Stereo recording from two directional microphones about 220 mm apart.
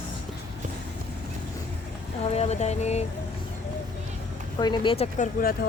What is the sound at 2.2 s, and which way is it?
Speech, 30° left (ahead or behind).